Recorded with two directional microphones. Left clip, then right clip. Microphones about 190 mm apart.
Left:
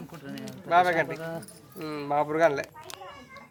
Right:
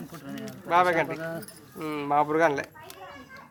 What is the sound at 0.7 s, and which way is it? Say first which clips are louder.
Speech: even; centre (ahead or behind).